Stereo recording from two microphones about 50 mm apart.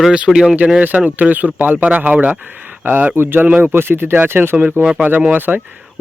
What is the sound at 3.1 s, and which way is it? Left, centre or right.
Speech, right.